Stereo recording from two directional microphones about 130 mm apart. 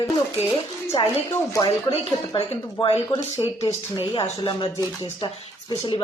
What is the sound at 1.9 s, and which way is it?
A woman's voice, 50° left (ahead or behind).